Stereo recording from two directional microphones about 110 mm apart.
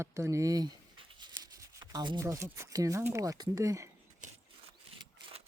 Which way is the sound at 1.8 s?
40° right (ahead or behind).